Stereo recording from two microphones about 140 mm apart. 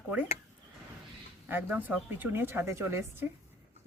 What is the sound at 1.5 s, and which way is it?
A woman's voice, 10° right (ahead or behind).